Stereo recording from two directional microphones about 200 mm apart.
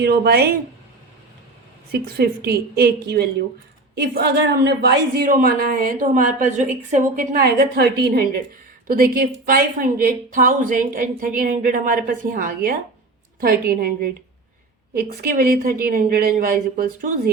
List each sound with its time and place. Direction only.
0.0 s a woman's voice: 50° right (ahead or behind)
1.9 s a woman's voice: 50° right (ahead or behind)